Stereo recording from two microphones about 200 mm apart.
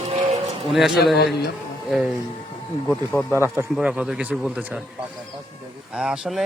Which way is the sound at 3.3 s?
15° right (ahead or behind).